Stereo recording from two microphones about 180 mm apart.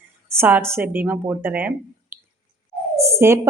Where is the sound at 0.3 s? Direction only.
10° right (ahead or behind).